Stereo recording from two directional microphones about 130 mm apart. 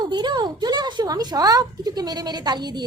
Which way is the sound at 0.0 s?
35° right (ahead or behind).